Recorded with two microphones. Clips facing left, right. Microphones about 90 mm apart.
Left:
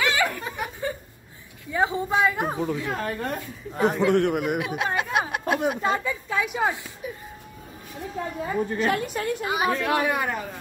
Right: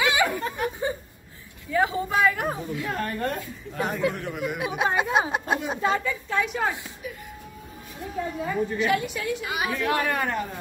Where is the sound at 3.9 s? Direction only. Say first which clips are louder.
Left 7 dB; 85° left; by 4.6 s 60° left (ahead or behind).